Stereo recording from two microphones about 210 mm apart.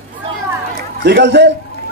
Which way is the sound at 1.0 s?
55° right (ahead or behind).